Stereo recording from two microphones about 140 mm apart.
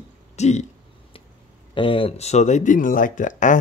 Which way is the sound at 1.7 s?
40° left (ahead or behind).